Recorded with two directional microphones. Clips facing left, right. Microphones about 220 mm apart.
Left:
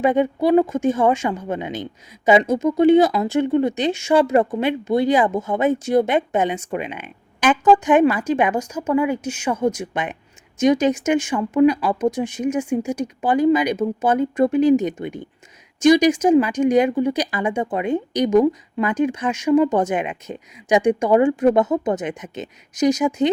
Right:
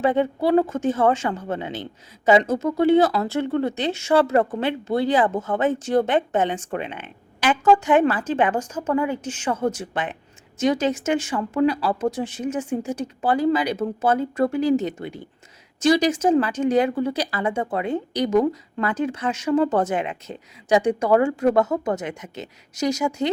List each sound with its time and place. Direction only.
0.0 s a woman's voice: 15° left (ahead or behind)